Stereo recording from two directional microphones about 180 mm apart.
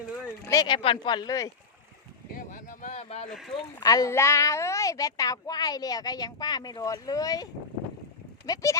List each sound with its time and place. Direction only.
0.4 s a woman's voice: 20° left (ahead or behind)
2.3 s boat: 50° left (ahead or behind)
2.9 s speech: 35° left (ahead or behind)
3.2 s speech: centre (ahead or behind)
3.5 s a woman's voice: 20° left (ahead or behind)
8.5 s a woman's voice: 20° left (ahead or behind)